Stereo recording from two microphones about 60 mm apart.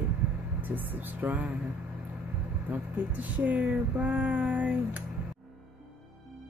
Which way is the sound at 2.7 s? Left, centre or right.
Right.